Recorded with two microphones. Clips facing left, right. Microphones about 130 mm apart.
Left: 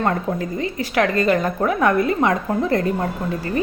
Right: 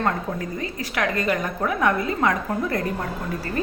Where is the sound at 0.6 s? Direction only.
25° left (ahead or behind).